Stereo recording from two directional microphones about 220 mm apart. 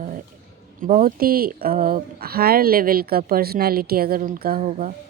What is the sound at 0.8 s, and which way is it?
Speech, 40° right (ahead or behind).